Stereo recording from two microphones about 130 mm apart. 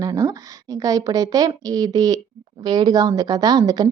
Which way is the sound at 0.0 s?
30° right (ahead or behind).